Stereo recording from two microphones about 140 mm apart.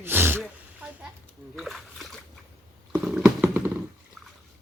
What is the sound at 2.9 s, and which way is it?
Stomach rumble, 5° right (ahead or behind).